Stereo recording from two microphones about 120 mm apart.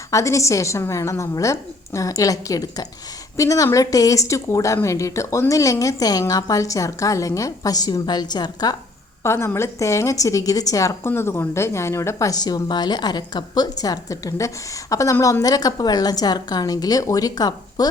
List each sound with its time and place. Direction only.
0.1 s a woman's voice: 25° left (ahead or behind)
9.2 s a woman's voice: 20° left (ahead or behind)